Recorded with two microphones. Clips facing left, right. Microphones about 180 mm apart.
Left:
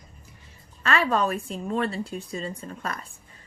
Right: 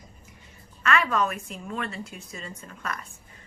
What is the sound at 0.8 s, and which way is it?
A woman's voice, 30° left (ahead or behind).